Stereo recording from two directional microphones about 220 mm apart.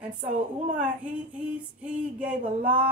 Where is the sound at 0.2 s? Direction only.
35° right (ahead or behind).